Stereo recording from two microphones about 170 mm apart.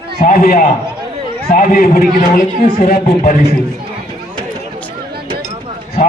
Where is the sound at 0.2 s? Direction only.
60° left (ahead or behind).